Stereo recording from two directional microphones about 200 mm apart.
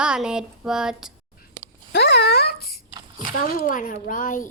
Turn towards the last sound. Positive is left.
turn(degrees=40)  # may be behind; listen again after turning